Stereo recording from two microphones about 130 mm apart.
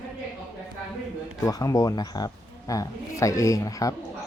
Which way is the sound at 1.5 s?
30° left (ahead or behind).